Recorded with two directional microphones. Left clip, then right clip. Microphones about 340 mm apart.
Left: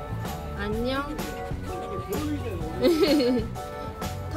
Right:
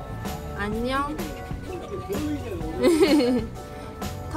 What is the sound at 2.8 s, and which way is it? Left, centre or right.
Music, centre.